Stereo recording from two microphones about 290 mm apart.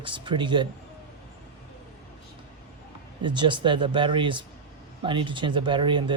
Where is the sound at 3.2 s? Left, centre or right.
Centre.